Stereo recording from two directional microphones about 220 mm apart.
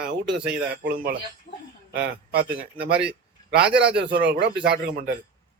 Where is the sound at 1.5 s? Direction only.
30° left (ahead or behind).